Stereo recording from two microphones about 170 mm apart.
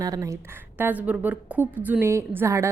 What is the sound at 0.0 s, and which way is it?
A woman's voice, 20° right (ahead or behind).